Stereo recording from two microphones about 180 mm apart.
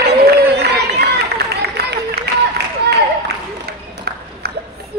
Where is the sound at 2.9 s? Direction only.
65° right (ahead or behind).